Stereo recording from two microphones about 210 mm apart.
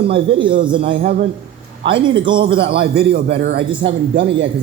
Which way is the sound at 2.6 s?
50° right (ahead or behind).